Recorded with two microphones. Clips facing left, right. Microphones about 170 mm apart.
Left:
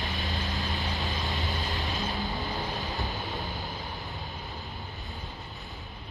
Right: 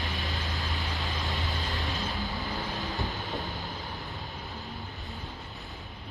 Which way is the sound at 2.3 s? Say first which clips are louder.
Left 1 dB; 20° left (ahead or behind).